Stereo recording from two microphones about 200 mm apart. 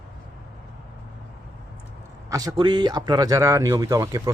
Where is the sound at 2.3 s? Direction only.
20° right (ahead or behind).